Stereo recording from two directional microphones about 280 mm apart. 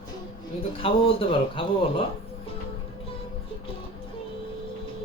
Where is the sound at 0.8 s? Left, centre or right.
Centre.